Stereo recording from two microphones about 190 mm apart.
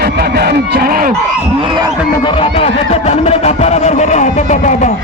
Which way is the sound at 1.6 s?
25° right (ahead or behind).